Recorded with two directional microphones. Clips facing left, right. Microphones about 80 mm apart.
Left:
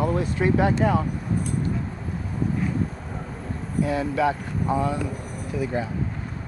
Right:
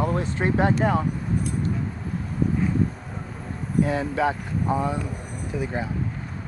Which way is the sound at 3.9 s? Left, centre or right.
Right.